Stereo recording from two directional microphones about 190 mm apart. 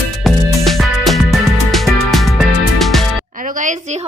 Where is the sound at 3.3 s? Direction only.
45° right (ahead or behind).